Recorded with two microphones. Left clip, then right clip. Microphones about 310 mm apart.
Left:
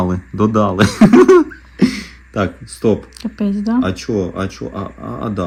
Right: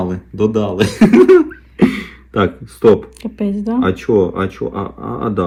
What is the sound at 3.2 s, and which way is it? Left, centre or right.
Speech, centre.